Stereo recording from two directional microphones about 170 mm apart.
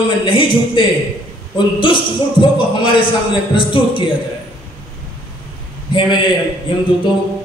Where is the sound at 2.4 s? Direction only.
30° left (ahead or behind).